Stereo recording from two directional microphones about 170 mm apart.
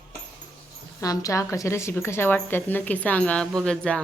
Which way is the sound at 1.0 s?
20° left (ahead or behind).